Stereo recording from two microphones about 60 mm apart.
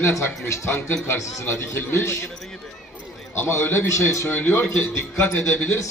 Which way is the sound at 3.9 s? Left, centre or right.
Left.